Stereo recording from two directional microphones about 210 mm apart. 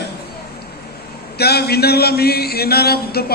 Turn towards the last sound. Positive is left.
turn(degrees=50)  # may be behind; listen again after turning